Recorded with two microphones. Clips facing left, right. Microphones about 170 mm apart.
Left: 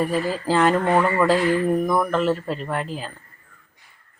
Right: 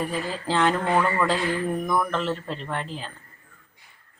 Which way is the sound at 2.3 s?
5° left (ahead or behind).